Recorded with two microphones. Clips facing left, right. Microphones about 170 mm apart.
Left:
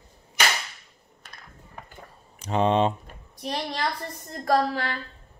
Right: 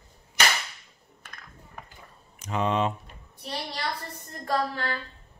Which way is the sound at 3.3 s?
85° left.